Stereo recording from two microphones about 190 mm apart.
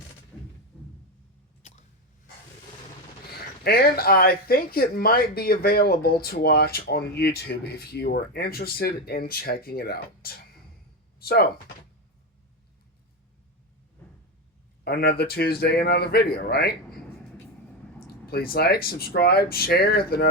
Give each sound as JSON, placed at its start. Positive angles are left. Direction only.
{"t": 0.3, "sound": "music", "side_deg": 10}
{"t": 3.2, "sound": "speech", "side_deg": 55}
{"t": 11.2, "sound": "a sound", "side_deg": 55}
{"t": 14.8, "sound": "speech", "side_deg": 55}
{"t": 18.3, "sound": "speech", "side_deg": 55}